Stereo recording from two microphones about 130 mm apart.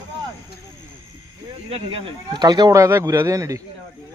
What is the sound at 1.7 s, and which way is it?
Speech, 45° right (ahead or behind).